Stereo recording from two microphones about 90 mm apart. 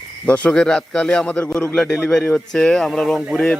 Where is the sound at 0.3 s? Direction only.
15° left (ahead or behind).